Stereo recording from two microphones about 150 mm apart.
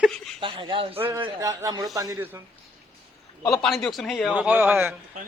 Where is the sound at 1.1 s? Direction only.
20° right (ahead or behind).